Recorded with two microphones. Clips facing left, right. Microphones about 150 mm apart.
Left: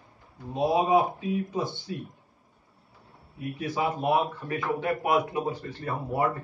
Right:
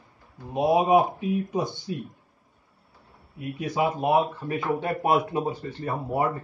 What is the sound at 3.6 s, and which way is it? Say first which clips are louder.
Speech: right 3 dB; 20° right (ahead or behind).